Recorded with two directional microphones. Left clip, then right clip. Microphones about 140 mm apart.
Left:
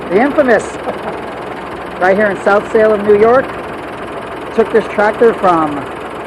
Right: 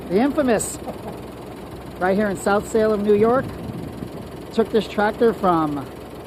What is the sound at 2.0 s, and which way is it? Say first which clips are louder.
Speech: left 9 dB; 50° right (ahead or behind).